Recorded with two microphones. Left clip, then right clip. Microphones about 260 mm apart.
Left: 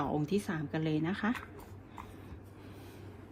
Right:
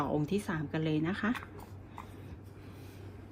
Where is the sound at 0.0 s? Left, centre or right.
Centre.